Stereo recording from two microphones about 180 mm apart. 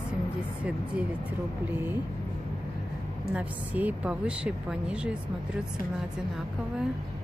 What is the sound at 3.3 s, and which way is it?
A woman's voice, 10° right (ahead or behind).